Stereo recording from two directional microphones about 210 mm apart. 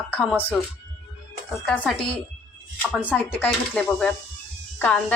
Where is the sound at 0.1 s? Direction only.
5° left (ahead or behind).